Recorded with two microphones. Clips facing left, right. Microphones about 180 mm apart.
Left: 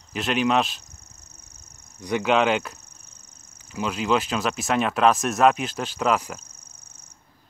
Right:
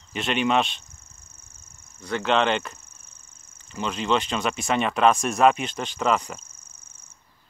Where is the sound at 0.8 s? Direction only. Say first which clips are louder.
Left 2 dB; 40° left (ahead or behind).